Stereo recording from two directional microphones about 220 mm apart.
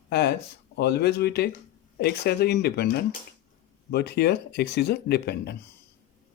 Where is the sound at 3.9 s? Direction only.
45° left (ahead or behind).